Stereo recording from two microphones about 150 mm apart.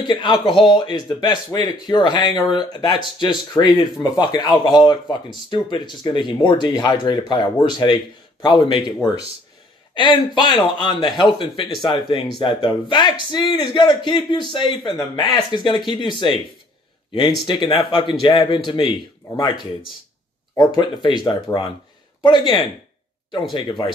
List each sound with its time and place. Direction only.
0.0 s speech: 30° left (ahead or behind)
9.9 s speech: 30° left (ahead or behind)
17.5 s speech: 35° left (ahead or behind)
19.5 s speech: centre (ahead or behind)
20.5 s speech: 30° left (ahead or behind)